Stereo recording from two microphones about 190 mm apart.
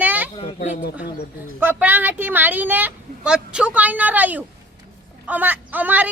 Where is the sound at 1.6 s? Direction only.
10° right (ahead or behind).